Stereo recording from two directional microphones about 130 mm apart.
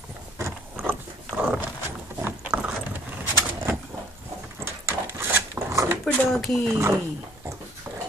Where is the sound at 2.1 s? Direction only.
15° right (ahead or behind).